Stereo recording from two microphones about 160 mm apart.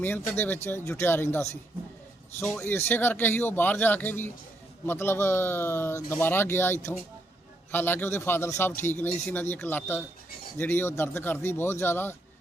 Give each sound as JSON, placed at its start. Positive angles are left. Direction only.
{"t": 0.0, "sound": "a man's voice", "side_deg": 10}